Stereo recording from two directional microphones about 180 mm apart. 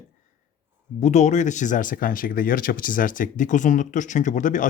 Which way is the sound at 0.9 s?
40° left (ahead or behind).